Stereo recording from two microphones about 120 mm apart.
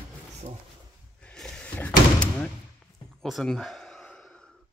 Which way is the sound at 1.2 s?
10° left (ahead or behind).